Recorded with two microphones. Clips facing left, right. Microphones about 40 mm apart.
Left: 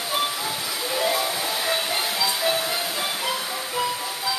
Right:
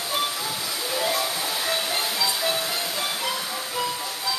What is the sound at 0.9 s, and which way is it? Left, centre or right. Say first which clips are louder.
Music: left 2 dB; centre.